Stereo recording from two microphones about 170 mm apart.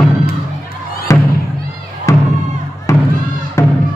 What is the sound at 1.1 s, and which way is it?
Music, 15° left (ahead or behind).